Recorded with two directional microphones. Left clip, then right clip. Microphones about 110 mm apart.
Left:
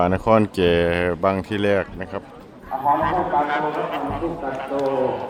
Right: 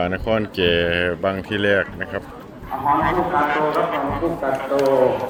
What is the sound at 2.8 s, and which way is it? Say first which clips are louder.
Speech: right 1 dB; centre (ahead or behind).